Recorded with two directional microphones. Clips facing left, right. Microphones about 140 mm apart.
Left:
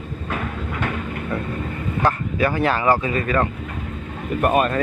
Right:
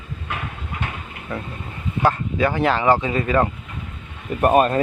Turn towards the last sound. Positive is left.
turn(degrees=-35)  # may be behind; listen again after turning